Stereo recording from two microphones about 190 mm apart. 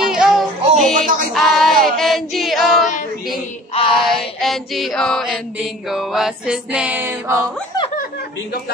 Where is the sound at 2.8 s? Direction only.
40° left (ahead or behind).